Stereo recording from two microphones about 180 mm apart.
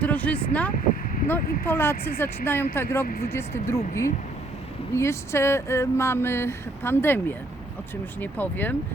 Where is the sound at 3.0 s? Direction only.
55° left (ahead or behind).